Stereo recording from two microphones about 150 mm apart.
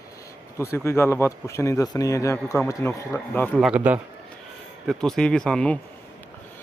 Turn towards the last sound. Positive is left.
turn(degrees=5)  # may be behind; listen again after turning